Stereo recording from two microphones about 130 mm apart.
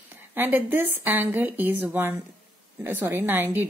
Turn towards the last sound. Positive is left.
turn(degrees=-15)  # may be behind; listen again after turning